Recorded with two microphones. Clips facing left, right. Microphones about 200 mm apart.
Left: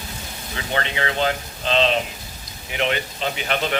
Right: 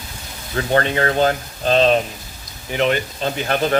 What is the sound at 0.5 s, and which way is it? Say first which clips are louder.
Speech: right 8 dB; 45° right (ahead or behind).